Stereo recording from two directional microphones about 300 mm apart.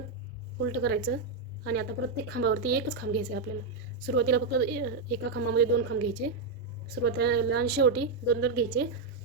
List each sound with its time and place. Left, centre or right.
0.6 s a woman's voice: right